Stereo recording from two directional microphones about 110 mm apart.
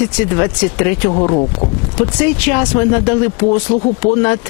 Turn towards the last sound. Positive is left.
turn(degrees=15)  # may be behind; listen again after turning